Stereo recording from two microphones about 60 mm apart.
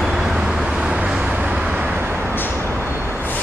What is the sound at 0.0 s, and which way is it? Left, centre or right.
Vehicle, centre.